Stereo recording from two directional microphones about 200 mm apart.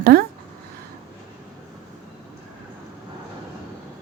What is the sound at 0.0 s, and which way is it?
Speech, 50° right (ahead or behind).